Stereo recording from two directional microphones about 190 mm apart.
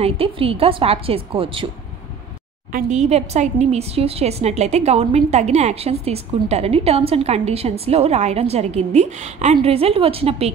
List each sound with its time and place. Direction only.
0.0 s a woman's voice: 30° right (ahead or behind)
2.7 s a woman's voice: 35° right (ahead or behind)